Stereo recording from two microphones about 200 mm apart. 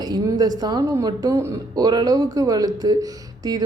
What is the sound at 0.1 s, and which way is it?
A woman's voice, 20° right (ahead or behind).